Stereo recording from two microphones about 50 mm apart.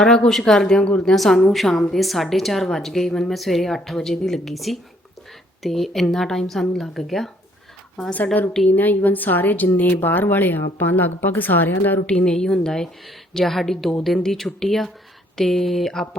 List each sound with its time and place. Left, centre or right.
0.0 s speech: centre
0.8 s a woman's voice: left
1.1 s a woman's voice: centre
8.7 s speech: left
12.0 s a woman's voice: centre